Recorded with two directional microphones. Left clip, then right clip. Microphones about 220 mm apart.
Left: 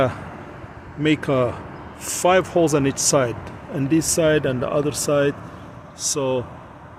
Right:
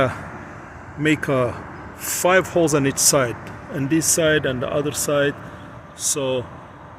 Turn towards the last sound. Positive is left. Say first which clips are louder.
# even
turn(degrees=15)  # may be behind; listen again after turning